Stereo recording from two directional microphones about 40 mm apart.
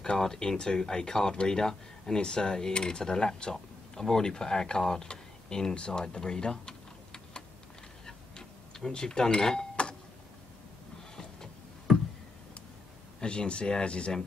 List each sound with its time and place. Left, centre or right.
0.0 s speech: centre
6.1 s typing: left
8.4 s speech: centre
13.2 s speech: left